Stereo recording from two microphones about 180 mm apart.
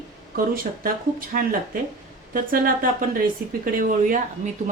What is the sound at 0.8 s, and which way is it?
Speech, 50° right (ahead or behind).